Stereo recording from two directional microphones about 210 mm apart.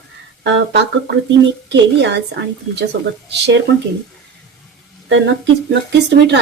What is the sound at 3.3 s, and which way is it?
Speech, 55° right (ahead or behind).